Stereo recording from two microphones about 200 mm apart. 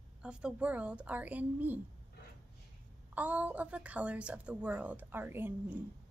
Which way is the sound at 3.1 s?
5° right (ahead or behind).